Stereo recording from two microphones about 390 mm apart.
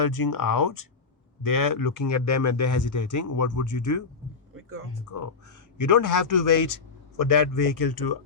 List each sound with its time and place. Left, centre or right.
0.0 s speech: left
4.5 s music: right
5.1 s speech: left